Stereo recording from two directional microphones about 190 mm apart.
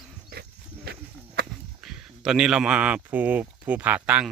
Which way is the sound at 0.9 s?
60° right (ahead or behind).